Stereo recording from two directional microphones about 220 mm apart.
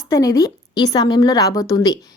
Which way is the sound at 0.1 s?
15° left (ahead or behind).